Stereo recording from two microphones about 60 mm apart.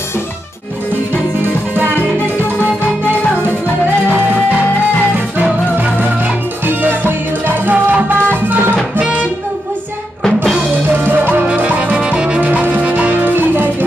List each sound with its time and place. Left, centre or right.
6.6 s music: right
10.9 s music: right
11.4 s music: right
12.4 s music: right